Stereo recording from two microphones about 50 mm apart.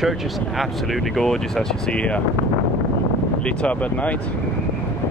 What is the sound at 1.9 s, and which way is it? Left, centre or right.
Speech, left.